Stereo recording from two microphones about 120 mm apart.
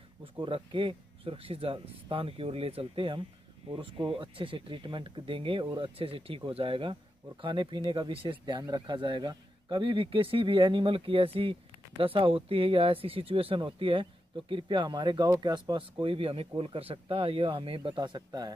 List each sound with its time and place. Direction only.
0.2 s speech: 45° right (ahead or behind)